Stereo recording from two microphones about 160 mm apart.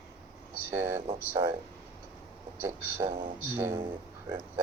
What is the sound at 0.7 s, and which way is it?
Speech, 15° right (ahead or behind).